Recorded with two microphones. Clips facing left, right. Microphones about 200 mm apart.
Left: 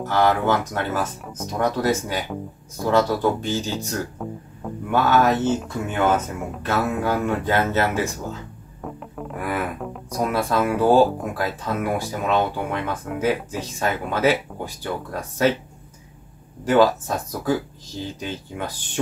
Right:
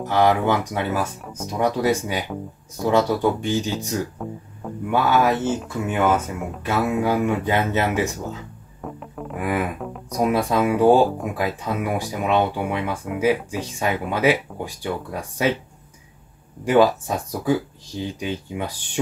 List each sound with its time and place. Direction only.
0.0 s speech: 15° right (ahead or behind)
8.8 s music: centre (ahead or behind)
9.4 s speech: 15° right (ahead or behind)
9.8 s music: centre (ahead or behind)
10.1 s speech: 15° right (ahead or behind)
16.6 s speech: 15° right (ahead or behind)